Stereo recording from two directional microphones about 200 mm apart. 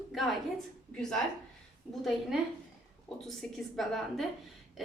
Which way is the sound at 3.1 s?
Centre (ahead or behind).